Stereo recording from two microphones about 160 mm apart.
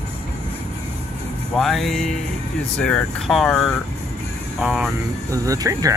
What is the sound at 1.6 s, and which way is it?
Speech, centre (ahead or behind).